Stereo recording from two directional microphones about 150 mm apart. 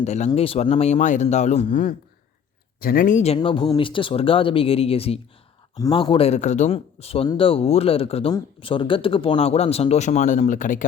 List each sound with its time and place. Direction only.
0.0 s speech: 50° left (ahead or behind)
3.3 s speech: 35° left (ahead or behind); by 10.8 s 60° left (ahead or behind)